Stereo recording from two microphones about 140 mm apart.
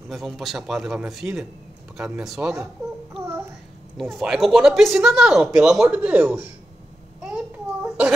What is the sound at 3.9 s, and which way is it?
A man's voice, centre (ahead or behind).